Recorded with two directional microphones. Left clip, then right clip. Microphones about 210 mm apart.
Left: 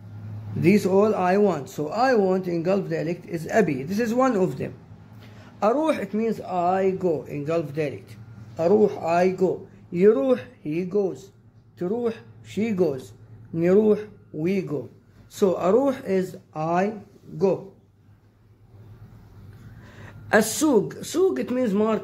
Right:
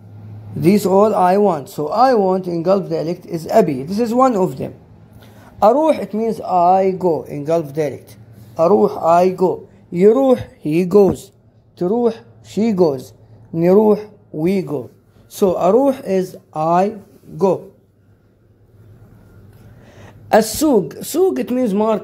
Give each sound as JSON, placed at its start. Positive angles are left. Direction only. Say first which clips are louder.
{"t": 0.6, "sound": "a woman's voice", "louder": "right 7 dB", "side_deg": -25}
{"t": 1.4, "sound": "speech", "louder": "right 6 dB", "side_deg": -10}
{"t": 1.8, "sound": "a woman's voice", "louder": "right 7 dB", "side_deg": -20}
{"t": 10.6, "sound": "speech", "louder": "right 12 dB", "side_deg": -40}
{"t": 11.8, "sound": "a woman's voice", "louder": "right 9 dB", "side_deg": -25}
{"t": 17.3, "sound": "speech", "louder": "right 7 dB", "side_deg": -45}
{"t": 20.0, "sound": "a woman's voice", "louder": "right 7 dB", "side_deg": -15}